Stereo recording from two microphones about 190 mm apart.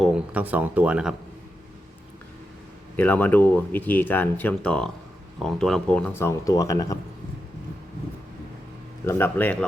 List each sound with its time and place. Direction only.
0.0 s speech: 5° right (ahead or behind)
2.9 s speech: 10° left (ahead or behind)
6.1 s speech: 15° left (ahead or behind)
9.0 s speech: 10° left (ahead or behind)